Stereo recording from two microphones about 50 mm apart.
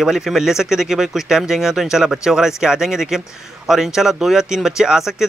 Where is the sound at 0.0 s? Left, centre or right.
Centre.